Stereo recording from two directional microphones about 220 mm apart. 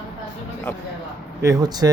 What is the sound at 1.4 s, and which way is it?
Speech, 15° right (ahead or behind).